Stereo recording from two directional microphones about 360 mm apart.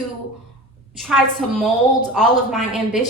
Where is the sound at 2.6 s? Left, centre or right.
Centre.